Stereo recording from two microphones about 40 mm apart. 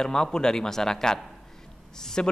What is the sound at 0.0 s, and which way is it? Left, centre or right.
Speech, centre.